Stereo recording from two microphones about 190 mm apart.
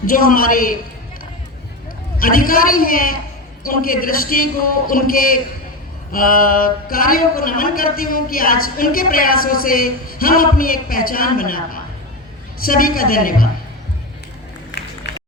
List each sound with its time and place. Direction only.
0.0 s a man's voice: 50° left (ahead or behind)
2.1 s a man's voice: 50° left (ahead or behind)
14.7 s a sound: 65° left (ahead or behind)